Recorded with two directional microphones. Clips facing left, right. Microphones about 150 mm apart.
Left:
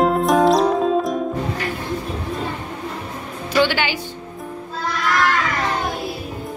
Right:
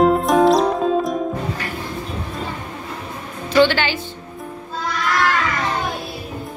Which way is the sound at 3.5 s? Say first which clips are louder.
Right 3 dB; 10° left (ahead or behind).